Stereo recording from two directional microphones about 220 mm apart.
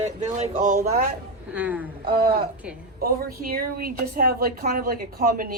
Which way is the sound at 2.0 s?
45° right (ahead or behind).